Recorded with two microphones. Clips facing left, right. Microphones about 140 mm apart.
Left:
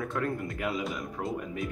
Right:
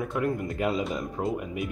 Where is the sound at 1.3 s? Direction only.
15° right (ahead or behind).